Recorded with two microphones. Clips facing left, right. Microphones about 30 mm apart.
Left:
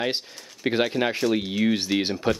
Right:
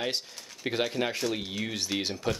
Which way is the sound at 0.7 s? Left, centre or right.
Left.